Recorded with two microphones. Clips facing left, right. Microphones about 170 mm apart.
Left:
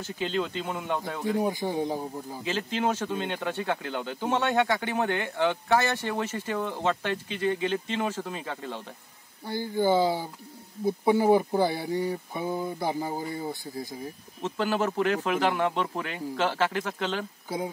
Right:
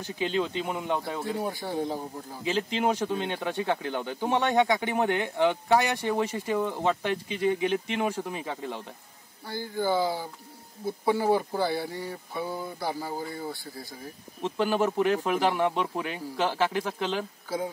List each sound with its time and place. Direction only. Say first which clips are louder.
0.0 s speech: right 1 dB; 15° right (ahead or behind)
1.4 s speech: left 3 dB; 15° left (ahead or behind)
2.4 s speech: right 2 dB; 15° right (ahead or behind)
9.5 s speech: left 3 dB; 20° left (ahead or behind)
14.4 s speech: right 1 dB; 15° right (ahead or behind)